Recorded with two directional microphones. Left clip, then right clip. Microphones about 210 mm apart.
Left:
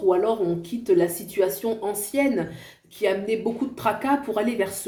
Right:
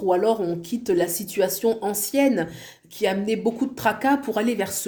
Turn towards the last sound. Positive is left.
turn(degrees=-50)  # may be behind; listen again after turning